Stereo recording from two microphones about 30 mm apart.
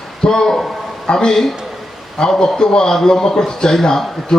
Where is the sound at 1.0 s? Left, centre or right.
Left.